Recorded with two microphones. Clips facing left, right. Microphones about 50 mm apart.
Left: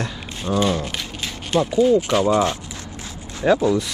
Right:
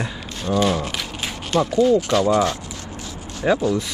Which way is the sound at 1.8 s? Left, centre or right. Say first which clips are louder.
Even; left.